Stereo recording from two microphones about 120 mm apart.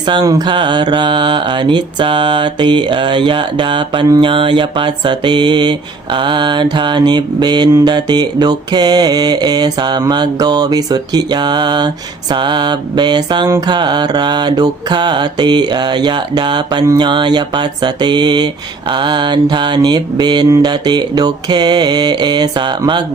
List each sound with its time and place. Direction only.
0.1 s mantra: 35° right (ahead or behind)